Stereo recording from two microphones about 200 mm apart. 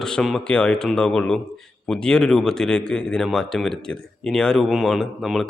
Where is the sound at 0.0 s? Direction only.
5° left (ahead or behind).